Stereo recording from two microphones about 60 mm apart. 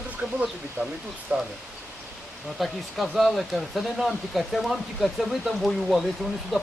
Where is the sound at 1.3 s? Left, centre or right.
Right.